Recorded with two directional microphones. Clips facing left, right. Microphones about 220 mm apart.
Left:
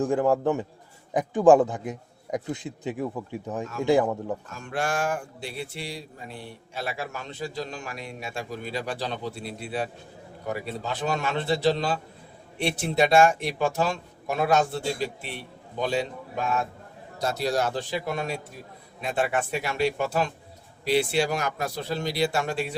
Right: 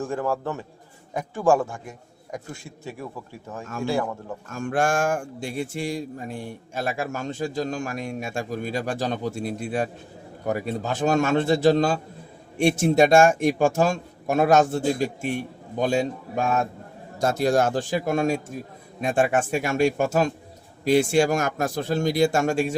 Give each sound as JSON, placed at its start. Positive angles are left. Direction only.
{"t": 0.0, "sound": "a man's voice", "side_deg": 15}
{"t": 4.4, "sound": "a man's voice", "side_deg": -50}